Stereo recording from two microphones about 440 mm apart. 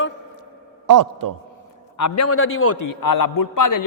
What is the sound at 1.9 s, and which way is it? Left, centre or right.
Speech, left.